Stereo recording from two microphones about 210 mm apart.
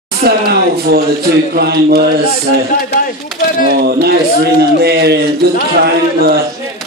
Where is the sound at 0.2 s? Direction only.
45° right (ahead or behind).